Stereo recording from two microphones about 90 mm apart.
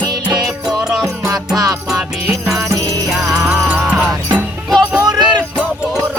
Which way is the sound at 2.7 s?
40° right (ahead or behind).